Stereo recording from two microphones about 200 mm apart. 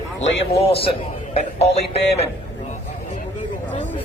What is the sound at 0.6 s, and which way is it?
A man's voice, 30° left (ahead or behind).